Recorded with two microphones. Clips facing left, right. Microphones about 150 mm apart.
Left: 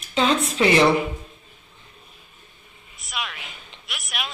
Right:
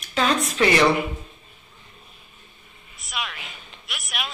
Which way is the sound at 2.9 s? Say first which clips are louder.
Even; centre (ahead or behind).